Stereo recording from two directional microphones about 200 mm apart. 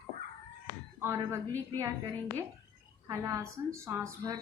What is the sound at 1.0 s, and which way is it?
Speech, 10° right (ahead or behind).